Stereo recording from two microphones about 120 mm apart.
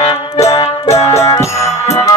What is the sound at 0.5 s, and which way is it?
Music, 60° left (ahead or behind).